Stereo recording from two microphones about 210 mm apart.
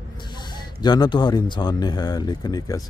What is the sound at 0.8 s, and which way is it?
A man's voice, 20° left (ahead or behind).